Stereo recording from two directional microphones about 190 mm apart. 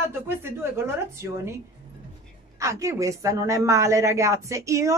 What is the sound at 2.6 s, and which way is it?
A woman's voice, 15° right (ahead or behind).